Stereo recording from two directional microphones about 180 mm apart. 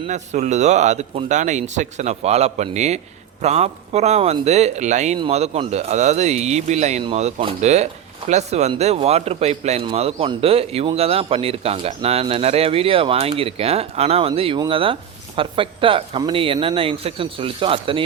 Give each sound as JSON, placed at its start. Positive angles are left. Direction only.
{"t": 0.1, "sound": "a man's voice", "side_deg": -40}